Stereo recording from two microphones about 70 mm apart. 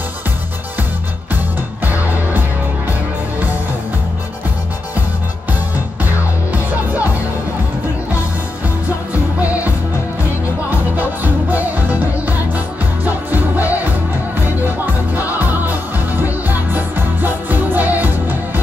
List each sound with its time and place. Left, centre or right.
1.9 s music: right
6.1 s music: right
11.0 s music: right
15.1 s music: right